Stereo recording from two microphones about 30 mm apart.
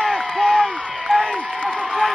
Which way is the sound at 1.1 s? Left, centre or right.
Centre.